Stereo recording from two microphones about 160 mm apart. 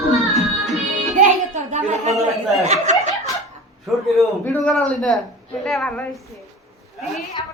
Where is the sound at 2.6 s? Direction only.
45° right (ahead or behind).